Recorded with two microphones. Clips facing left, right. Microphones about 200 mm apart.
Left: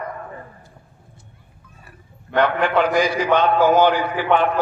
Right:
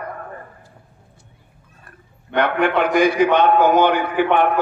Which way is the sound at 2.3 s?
60° right (ahead or behind).